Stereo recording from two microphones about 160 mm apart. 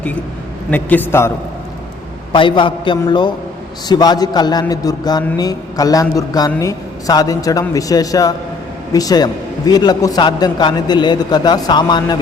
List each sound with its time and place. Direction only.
0.7 s a man's voice: 10° left (ahead or behind)
2.3 s a man's voice: 30° left (ahead or behind)